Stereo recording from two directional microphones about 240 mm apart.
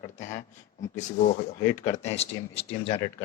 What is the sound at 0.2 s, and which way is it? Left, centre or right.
Speech, left.